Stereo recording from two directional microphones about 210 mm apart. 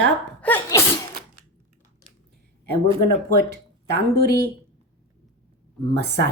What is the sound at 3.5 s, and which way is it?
Speech, 50° right (ahead or behind).